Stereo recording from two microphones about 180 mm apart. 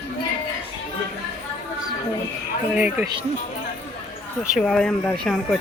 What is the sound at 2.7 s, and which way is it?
Speech, 10° right (ahead or behind).